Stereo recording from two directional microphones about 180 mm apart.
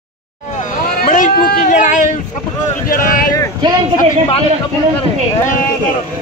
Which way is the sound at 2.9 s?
50° left (ahead or behind).